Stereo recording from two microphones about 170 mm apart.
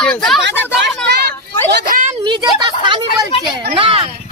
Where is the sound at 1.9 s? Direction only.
50° right (ahead or behind).